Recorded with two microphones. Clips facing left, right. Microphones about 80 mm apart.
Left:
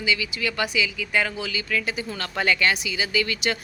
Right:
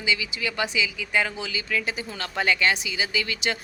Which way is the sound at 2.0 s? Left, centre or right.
Centre.